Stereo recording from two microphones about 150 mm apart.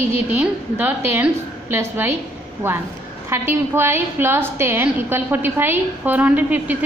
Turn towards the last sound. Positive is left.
turn(degrees=-10)  # may be behind; listen again after turning